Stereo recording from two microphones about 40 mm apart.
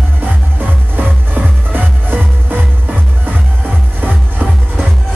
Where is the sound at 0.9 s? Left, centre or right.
Right.